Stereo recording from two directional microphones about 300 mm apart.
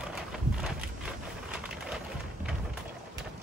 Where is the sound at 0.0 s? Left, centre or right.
Centre.